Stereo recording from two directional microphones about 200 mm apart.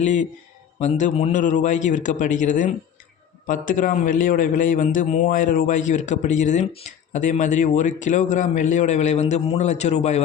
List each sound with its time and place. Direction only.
0.0 s a man's voice: 35° left (ahead or behind)